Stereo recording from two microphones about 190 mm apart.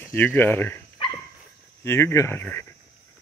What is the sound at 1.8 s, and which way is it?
Speech, 15° left (ahead or behind).